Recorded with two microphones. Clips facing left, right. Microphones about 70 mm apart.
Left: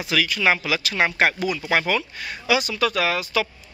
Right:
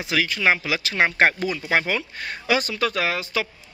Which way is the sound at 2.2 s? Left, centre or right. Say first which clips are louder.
Left 1 dB; right.